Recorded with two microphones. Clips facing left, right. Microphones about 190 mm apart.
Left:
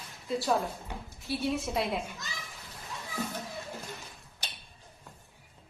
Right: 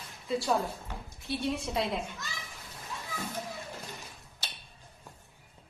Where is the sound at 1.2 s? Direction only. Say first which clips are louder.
Left 1 dB; centre (ahead or behind).